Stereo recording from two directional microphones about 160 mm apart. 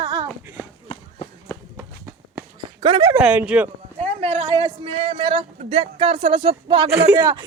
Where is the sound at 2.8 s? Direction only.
25° right (ahead or behind).